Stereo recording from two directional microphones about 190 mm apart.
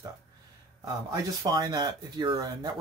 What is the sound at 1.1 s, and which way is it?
Speech, 20° right (ahead or behind).